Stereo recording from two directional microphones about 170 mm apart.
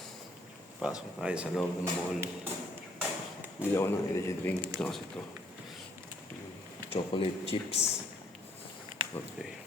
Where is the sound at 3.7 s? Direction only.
15° left (ahead or behind).